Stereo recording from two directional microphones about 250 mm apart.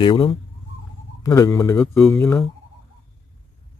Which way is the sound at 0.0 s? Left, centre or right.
Left.